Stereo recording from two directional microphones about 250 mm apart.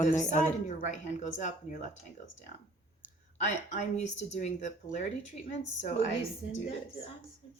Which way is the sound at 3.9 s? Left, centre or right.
Left.